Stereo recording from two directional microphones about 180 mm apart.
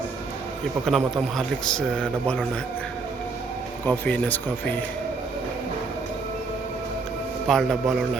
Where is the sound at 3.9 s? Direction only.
10° left (ahead or behind).